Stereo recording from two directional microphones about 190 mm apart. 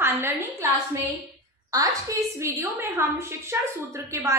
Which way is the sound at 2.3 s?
15° right (ahead or behind).